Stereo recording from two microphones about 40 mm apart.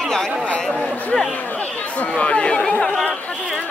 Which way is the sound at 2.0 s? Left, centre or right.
Left.